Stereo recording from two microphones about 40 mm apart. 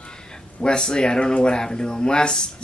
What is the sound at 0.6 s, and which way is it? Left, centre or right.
Speech, left.